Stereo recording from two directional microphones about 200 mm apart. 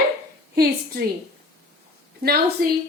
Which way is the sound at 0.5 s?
50° right (ahead or behind).